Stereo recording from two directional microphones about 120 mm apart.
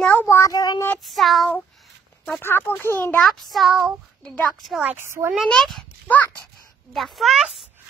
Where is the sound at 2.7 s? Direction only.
15° left (ahead or behind).